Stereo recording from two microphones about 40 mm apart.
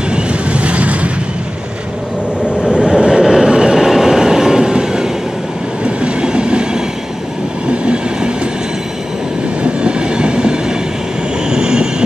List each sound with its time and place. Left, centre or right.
0.1 s vehicle: right
2.6 s train: right
7.8 s train: right
9.6 s train: right